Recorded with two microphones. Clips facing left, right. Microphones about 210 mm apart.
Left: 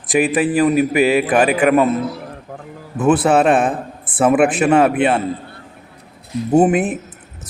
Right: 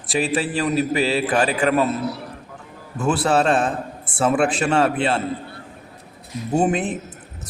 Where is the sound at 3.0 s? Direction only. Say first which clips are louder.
Left 6 dB; 20° left (ahead or behind).